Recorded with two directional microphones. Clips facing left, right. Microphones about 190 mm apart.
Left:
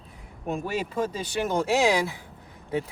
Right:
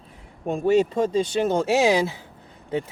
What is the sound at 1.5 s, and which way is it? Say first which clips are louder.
Speech: right 1 dB; 20° right (ahead or behind).